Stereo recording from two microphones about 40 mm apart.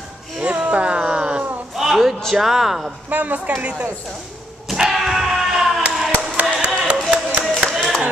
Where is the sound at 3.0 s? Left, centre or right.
Right.